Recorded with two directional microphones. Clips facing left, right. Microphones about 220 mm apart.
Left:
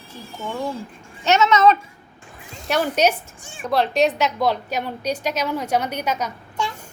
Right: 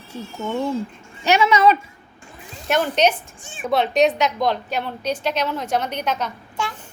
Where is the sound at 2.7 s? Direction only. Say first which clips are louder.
Right 1 dB; 10° left (ahead or behind).